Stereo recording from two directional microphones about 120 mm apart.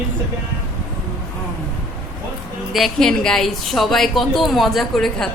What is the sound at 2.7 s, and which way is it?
A woman's voice, centre (ahead or behind).